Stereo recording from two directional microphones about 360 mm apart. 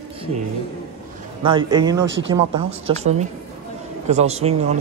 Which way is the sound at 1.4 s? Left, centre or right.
Centre.